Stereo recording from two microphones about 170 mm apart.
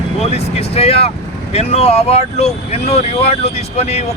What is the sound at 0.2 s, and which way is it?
Speech, 40° left (ahead or behind).